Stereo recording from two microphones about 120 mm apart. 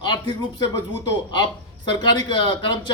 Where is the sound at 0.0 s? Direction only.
35° left (ahead or behind).